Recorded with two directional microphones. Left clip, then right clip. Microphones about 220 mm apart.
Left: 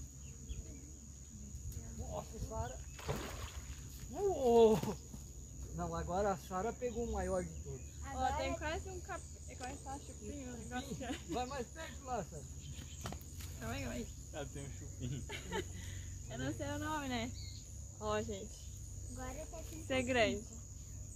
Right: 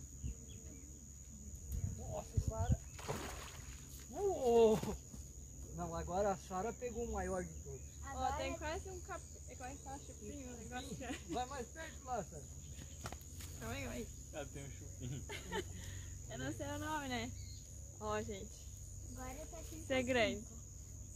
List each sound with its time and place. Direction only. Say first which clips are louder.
3.0 s a sound: left 3 dB; 15° right (ahead or behind)
4.1 s a sound: left 2 dB; 5° left (ahead or behind)
5.8 s cricket: left 1 dB; 10° left (ahead or behind)
8.1 s speech: left 3 dB; 5° left (ahead or behind)
13.0 s cricket: left 1 dB; centre (ahead or behind)
15.2 s speech: left 1 dB; centre (ahead or behind)
19.9 s speech: left 2 dB; 10° right (ahead or behind)